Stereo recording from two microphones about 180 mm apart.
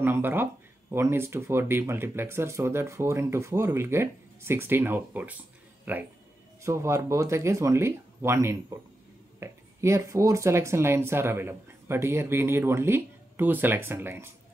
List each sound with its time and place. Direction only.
0.0 s speech: 10° right (ahead or behind)